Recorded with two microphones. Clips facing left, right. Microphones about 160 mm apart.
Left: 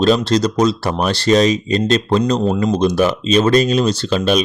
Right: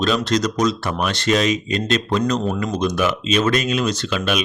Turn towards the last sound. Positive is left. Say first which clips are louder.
# left 6 dB
turn(degrees=35)  # may be behind; listen again after turning